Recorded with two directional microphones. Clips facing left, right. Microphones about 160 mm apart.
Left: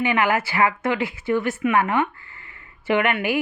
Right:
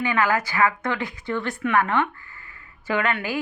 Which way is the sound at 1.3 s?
15° left (ahead or behind).